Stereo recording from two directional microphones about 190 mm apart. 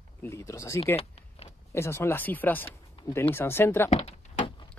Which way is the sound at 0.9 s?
30° left (ahead or behind).